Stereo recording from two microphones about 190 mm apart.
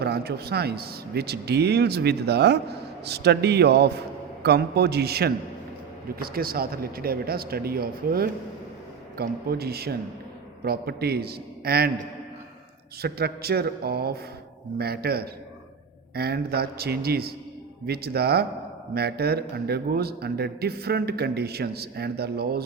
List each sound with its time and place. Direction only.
0.0 s a man's voice: 55° right (ahead or behind)
13.0 s a man's voice: 55° right (ahead or behind)